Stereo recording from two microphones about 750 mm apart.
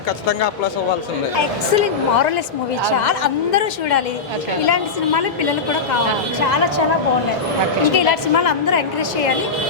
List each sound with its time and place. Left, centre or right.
1.7 s a woman's voice: left
7.9 s a woman's voice: left